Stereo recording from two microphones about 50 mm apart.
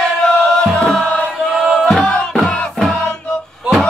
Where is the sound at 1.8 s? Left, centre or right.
Centre.